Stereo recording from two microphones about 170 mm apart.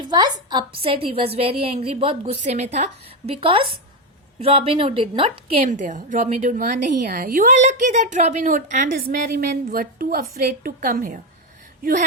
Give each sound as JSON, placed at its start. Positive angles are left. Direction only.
{"t": 0.1, "sound": "a woman's voice", "side_deg": -25}
{"t": 5.5, "sound": "a woman's voice", "side_deg": -45}